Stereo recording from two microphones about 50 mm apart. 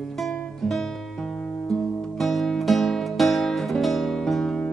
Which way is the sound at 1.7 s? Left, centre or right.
Centre.